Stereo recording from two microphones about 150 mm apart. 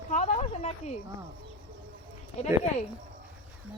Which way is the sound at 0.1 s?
50° left (ahead or behind).